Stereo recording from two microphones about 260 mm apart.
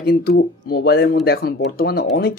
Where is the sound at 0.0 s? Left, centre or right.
Left.